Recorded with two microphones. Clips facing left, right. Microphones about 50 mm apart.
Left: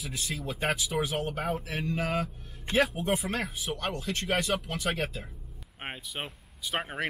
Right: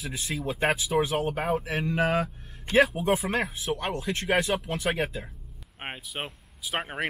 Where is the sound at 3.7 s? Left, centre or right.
Centre.